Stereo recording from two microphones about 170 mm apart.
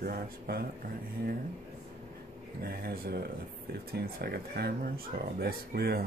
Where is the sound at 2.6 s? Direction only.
60° right (ahead or behind).